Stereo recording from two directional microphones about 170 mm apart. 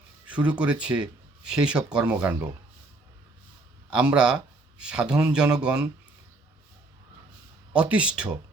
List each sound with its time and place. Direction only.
0.3 s speech: 5° right (ahead or behind)
3.8 s speech: 5° right (ahead or behind)
7.8 s speech: 5° right (ahead or behind)